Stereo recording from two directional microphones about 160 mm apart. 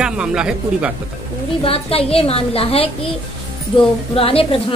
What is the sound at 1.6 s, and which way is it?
A woman's voice, 35° left (ahead or behind).